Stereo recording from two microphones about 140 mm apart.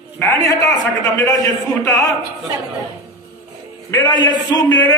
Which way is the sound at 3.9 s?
30° left (ahead or behind).